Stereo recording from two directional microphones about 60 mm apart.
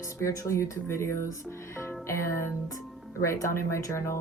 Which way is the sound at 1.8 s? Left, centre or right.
Left.